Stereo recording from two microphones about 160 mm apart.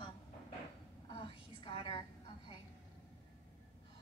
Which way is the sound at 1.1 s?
30° left (ahead or behind).